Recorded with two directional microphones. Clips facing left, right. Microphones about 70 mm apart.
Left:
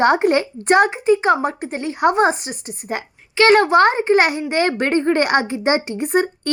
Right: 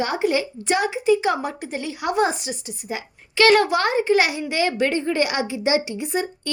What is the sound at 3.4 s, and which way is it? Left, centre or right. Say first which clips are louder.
A woman's voice: left 4 dB; left.